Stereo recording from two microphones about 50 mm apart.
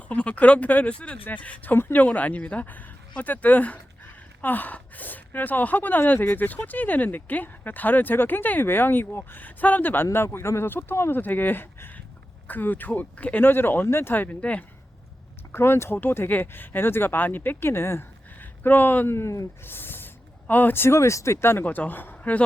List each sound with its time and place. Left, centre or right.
0.1 s speech: left
1.7 s speech: left
11.2 s speech: left
13.4 s speech: left
13.8 s speech: left
14.1 s speech: left
15.5 s speech: left
17.7 s speech: left
18.3 s a sound: left
19.0 s speech: left
19.6 s speech: left
20.8 s speech: left
21.6 s speech: left